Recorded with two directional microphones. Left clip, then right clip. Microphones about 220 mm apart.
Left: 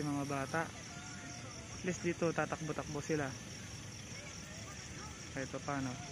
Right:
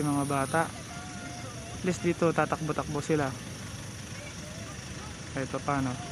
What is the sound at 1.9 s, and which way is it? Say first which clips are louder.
Speech: right 9 dB; 5° right (ahead or behind).